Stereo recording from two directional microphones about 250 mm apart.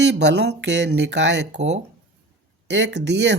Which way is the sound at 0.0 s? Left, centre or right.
Right.